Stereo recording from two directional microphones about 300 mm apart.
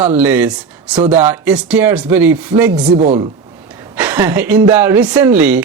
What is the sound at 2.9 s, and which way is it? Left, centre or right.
Speech, centre.